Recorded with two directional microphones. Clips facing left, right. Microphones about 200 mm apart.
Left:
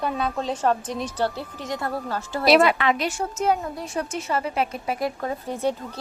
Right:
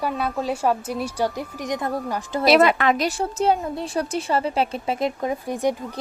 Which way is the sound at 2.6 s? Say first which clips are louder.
Right 2 dB; 45° right (ahead or behind).